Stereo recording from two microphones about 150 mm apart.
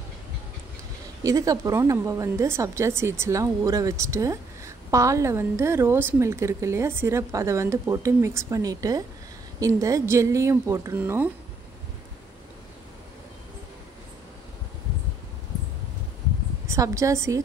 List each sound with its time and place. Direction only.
1.2 s a woman's voice: 25° right (ahead or behind)
16.6 s a woman's voice: 20° right (ahead or behind)